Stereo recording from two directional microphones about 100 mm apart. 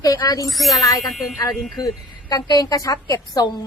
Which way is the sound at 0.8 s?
40° left (ahead or behind).